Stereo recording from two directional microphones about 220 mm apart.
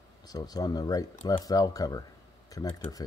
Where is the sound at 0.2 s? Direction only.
15° left (ahead or behind).